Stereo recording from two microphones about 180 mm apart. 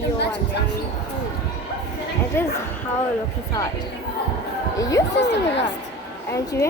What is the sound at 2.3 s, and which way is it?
Speech, 15° left (ahead or behind).